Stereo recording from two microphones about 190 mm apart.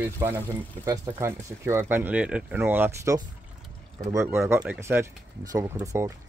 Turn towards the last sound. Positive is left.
turn(degrees=-15)  # may be behind; listen again after turning